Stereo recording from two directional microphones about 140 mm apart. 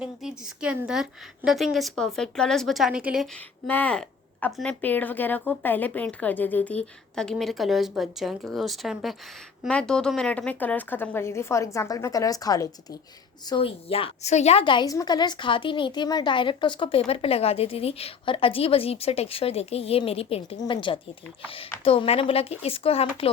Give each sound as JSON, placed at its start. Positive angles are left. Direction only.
{"t": 0.0, "sound": "a woman's voice", "side_deg": -5}
{"t": 3.3, "sound": "a woman's voice", "side_deg": 10}
{"t": 13.7, "sound": "a woman's voice", "side_deg": 45}
{"t": 14.6, "sound": "a woman's voice", "side_deg": 35}